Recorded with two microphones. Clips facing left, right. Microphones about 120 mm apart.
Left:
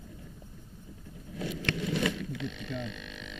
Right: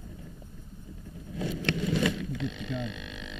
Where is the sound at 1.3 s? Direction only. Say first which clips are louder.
Right 3 dB; 30° right (ahead or behind).